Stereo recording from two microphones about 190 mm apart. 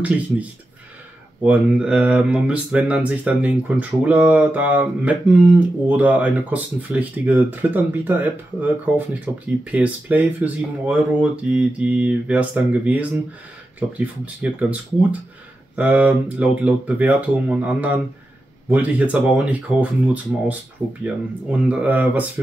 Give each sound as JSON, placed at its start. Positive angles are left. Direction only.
{"t": 1.4, "sound": "speech", "side_deg": -5}
{"t": 21.0, "sound": "speech", "side_deg": -5}